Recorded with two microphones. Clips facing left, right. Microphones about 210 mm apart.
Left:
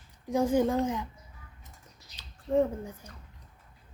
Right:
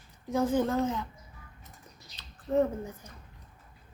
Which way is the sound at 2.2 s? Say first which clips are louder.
Left 1 dB; 10° left (ahead or behind).